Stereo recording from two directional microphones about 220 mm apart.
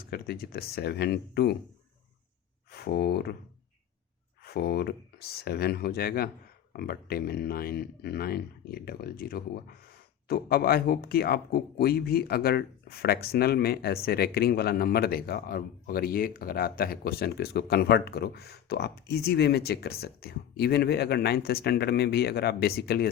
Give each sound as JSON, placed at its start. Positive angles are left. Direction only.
{"t": 0.0, "sound": "speech", "side_deg": 45}
{"t": 2.7, "sound": "speech", "side_deg": 45}
{"t": 4.4, "sound": "speech", "side_deg": 45}